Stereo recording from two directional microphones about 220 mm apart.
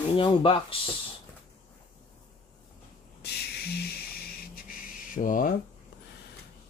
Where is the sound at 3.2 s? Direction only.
45° left (ahead or behind).